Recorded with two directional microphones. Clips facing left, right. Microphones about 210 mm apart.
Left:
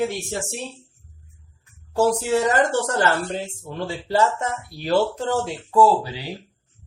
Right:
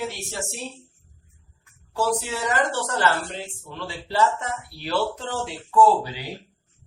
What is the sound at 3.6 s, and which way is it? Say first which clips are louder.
Speech: left 6 dB; 45° left (ahead or behind).